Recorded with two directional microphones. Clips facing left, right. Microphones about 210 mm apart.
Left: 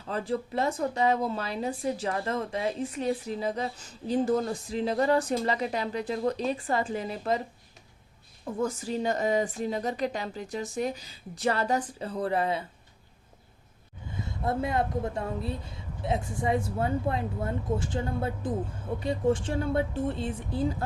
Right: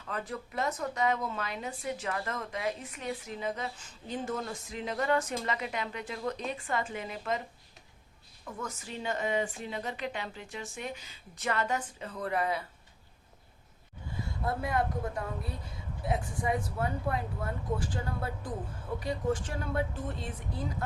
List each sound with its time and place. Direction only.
0.0 s speech: 30° left (ahead or behind)
8.4 s speech: 30° left (ahead or behind)
14.2 s speech: 25° left (ahead or behind)